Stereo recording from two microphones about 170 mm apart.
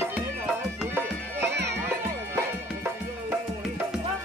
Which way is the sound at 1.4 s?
80° right.